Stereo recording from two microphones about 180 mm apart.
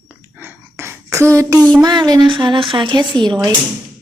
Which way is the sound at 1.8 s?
20° right (ahead or behind).